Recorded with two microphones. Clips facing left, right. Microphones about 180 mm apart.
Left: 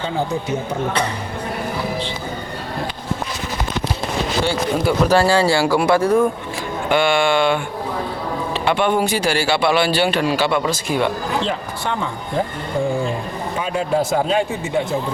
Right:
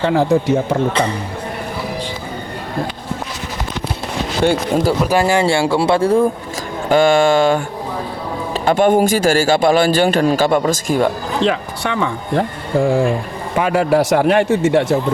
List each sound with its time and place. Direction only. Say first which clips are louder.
0.0 s speech: right 8 dB; 90° right
4.4 s speech: right 7 dB; 40° right (ahead or behind)
5.0 s speech: even; 15° right (ahead or behind)
6.8 s speech: right 5 dB; 40° right (ahead or behind)
8.6 s a man's voice: right 6 dB; 45° right (ahead or behind)
11.4 s speech: right 5 dB; 75° right (ahead or behind); by 13.1 s 90° right
13.6 s speech: right 6 dB; 70° right (ahead or behind)